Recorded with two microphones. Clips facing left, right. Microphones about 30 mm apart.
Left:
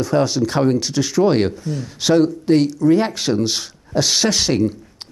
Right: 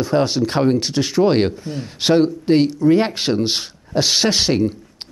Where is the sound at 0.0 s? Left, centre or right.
Right.